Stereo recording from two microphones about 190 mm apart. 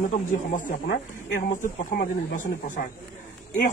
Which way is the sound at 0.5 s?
45° left (ahead or behind).